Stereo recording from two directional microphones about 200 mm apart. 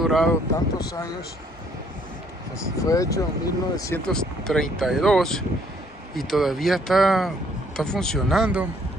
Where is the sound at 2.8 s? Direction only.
15° left (ahead or behind).